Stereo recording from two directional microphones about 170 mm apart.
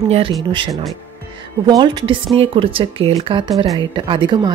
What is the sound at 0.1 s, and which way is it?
Speech, 30° right (ahead or behind).